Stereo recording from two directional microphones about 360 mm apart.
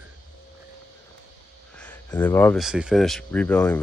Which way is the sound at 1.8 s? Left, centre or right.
Centre.